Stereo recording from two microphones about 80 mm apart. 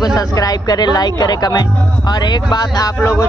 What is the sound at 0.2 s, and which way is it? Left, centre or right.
Speech, left.